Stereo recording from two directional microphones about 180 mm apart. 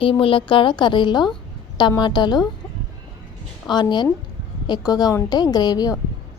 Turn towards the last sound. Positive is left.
turn(degrees=20)  # may be behind; listen again after turning